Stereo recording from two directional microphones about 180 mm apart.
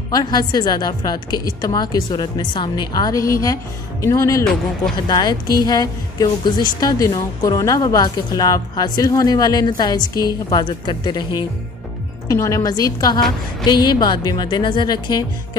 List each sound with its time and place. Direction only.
0.1 s a woman's voice: 25° left (ahead or behind)